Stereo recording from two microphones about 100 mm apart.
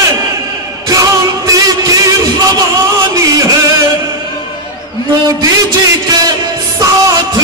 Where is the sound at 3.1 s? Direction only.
35° right (ahead or behind).